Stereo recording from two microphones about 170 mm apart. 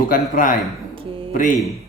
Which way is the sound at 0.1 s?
50° left (ahead or behind).